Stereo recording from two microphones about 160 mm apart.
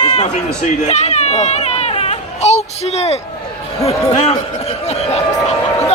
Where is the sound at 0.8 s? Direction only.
45° left (ahead or behind).